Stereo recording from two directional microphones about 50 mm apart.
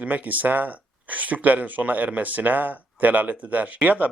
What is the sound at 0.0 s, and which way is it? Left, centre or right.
Speech, right.